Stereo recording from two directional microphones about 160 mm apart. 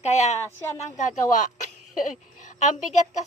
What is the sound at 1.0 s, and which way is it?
Speech, 50° left (ahead or behind).